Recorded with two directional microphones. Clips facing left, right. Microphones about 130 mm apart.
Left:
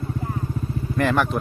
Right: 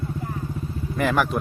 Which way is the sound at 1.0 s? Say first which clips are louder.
Left 1 dB; 5° right (ahead or behind).